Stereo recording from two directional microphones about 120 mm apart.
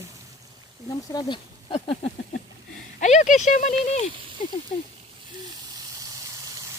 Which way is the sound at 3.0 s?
85° left.